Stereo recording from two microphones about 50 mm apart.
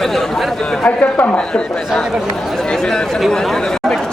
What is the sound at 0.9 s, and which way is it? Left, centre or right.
Speech, left.